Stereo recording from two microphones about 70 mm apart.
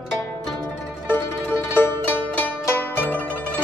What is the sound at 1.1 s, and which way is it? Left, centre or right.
Music, left.